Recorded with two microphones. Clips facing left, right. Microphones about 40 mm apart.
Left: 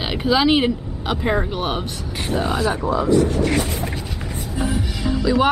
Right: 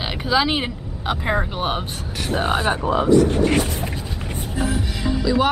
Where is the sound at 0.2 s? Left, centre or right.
Centre.